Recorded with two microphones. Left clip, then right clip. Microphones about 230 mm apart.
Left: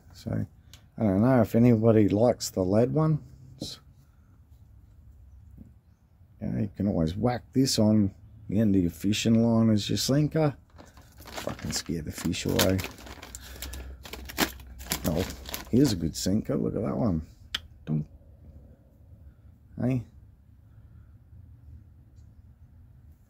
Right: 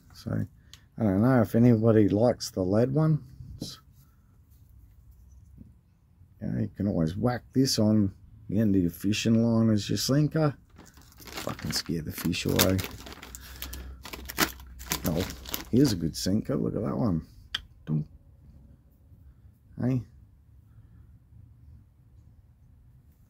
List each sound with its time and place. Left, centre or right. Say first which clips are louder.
0.1 s speech: even; centre
6.4 s speech: left 1 dB; centre
11.1 s crumpling: even; centre
19.7 s speech: left 1 dB; centre